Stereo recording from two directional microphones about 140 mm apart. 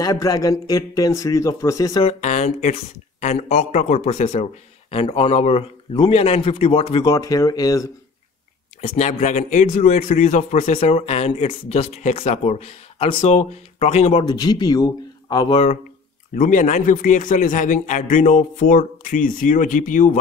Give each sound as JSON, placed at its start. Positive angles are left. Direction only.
{"t": 0.0, "sound": "a man's voice", "side_deg": 25}
{"t": 2.0, "sound": "speech", "side_deg": 55}
{"t": 4.9, "sound": "a man's voice", "side_deg": 40}
{"t": 7.1, "sound": "a man's voice", "side_deg": 25}
{"t": 8.8, "sound": "a man's voice", "side_deg": 55}
{"t": 14.1, "sound": "a man's voice", "side_deg": 30}
{"t": 16.3, "sound": "a man's voice", "side_deg": 70}